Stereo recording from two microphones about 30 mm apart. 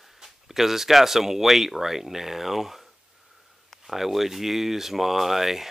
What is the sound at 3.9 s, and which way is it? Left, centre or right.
Speech, centre.